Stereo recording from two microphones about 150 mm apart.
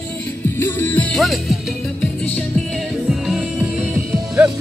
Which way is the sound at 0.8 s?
10° left (ahead or behind).